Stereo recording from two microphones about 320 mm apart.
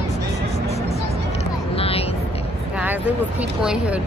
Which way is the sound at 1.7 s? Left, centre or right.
Centre.